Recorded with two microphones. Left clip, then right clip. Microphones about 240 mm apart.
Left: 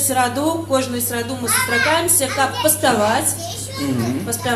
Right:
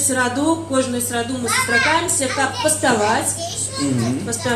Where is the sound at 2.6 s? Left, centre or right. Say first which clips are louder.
Left 1 dB; left.